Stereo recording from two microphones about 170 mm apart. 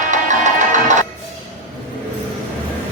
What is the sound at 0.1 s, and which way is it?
Music, 45° right (ahead or behind).